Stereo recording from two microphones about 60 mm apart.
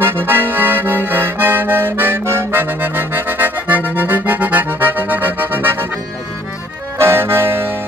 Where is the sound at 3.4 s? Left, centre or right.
Right.